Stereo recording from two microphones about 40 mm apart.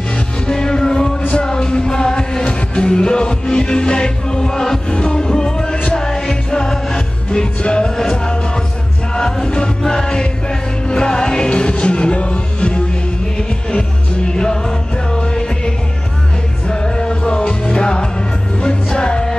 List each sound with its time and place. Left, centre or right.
0.5 s music: centre